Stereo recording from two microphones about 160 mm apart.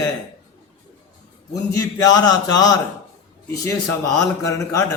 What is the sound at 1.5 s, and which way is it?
A man's voice, 20° left (ahead or behind).